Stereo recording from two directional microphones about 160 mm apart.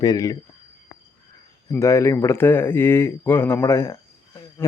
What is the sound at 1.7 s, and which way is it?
Speech, 20° left (ahead or behind).